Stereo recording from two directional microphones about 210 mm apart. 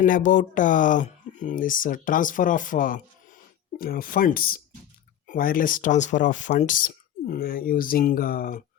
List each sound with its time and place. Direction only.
0.0 s speech: 40° left (ahead or behind)